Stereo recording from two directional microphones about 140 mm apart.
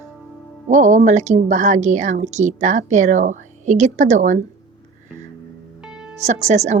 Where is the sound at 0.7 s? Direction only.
60° right (ahead or behind).